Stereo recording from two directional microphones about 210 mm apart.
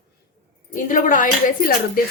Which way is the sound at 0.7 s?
40° left (ahead or behind).